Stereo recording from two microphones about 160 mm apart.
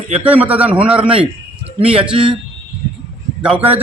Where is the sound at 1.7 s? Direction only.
35° right (ahead or behind).